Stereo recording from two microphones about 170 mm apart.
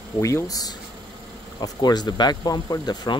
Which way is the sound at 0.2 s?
15° left (ahead or behind).